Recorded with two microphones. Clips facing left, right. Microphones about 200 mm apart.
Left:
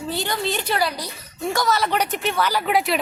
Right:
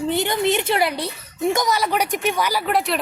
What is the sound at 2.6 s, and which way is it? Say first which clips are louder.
Speech: left 1 dB; centre (ahead or behind).